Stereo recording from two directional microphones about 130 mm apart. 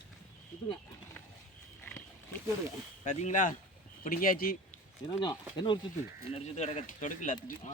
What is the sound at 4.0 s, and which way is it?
Speech, 90° left.